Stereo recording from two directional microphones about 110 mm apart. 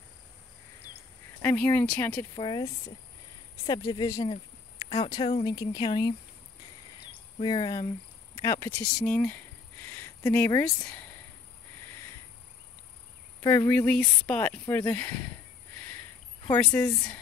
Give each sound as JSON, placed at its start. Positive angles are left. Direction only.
{"t": 1.4, "sound": "speech", "side_deg": 15}
{"t": 2.3, "sound": "speech", "side_deg": 45}
{"t": 3.6, "sound": "speech", "side_deg": 35}
{"t": 4.8, "sound": "speech", "side_deg": 50}
{"t": 5.5, "sound": "speech", "side_deg": 35}
{"t": 7.3, "sound": "speech", "side_deg": 45}
{"t": 8.4, "sound": "speech", "side_deg": 30}
{"t": 8.9, "sound": "a sound", "side_deg": 10}
{"t": 9.8, "sound": "a sound", "side_deg": 25}
{"t": 10.6, "sound": "speech", "side_deg": 5}
{"t": 13.4, "sound": "speech", "side_deg": 25}
{"t": 16.7, "sound": "speech", "side_deg": 25}